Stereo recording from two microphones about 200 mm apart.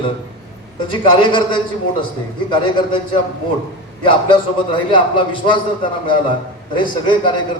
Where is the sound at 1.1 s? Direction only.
25° left (ahead or behind).